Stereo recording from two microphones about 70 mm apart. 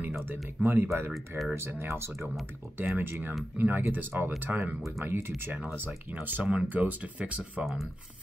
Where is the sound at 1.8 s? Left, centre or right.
Right.